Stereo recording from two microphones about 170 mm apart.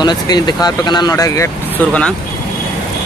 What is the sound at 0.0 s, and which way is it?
Speech, 25° left (ahead or behind).